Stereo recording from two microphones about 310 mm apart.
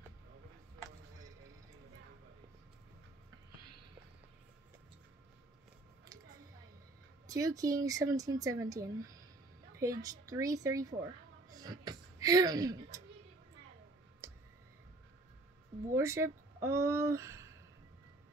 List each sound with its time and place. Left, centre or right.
7.2 s speech: centre
11.4 s a sound: centre
14.2 s clicking: centre
15.9 s speech: centre